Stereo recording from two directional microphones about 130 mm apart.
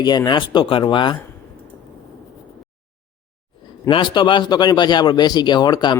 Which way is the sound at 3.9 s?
40° left (ahead or behind).